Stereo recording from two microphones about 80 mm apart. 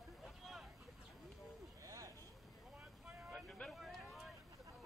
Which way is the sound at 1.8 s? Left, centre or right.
Right.